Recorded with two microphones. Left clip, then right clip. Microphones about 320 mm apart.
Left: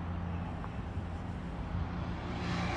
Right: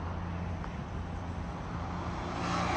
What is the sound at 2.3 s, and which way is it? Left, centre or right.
Vehicle, right.